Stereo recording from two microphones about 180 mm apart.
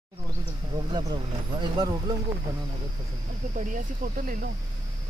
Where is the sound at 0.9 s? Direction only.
25° right (ahead or behind).